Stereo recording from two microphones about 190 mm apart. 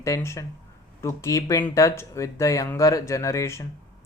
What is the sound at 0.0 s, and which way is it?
Speech, 15° left (ahead or behind).